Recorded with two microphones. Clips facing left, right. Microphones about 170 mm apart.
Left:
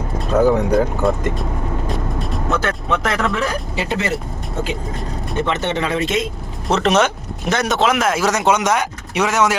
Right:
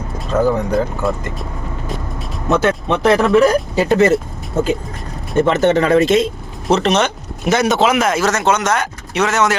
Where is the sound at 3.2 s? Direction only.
40° right (ahead or behind).